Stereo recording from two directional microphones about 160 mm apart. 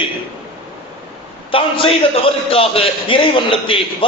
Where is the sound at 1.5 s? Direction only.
35° left (ahead or behind).